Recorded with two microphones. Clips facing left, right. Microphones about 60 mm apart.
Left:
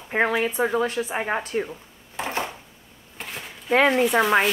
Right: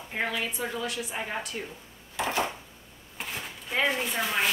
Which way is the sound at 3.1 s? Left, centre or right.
Centre.